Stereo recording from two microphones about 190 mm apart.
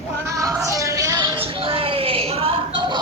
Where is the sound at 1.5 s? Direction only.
30° right (ahead or behind).